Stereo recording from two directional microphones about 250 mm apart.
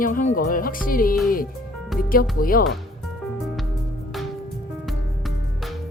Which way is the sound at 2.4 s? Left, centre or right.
Left.